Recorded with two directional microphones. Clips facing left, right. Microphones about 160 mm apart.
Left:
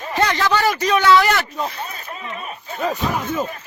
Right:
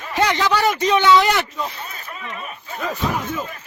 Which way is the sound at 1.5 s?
30° left (ahead or behind).